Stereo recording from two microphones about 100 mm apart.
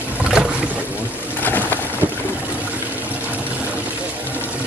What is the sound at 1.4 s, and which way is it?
Boat, 20° left (ahead or behind).